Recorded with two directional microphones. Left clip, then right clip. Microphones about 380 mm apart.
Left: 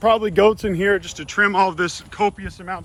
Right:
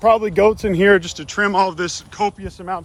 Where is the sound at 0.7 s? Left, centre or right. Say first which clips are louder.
Right 6 dB; right; by 2.8 s centre.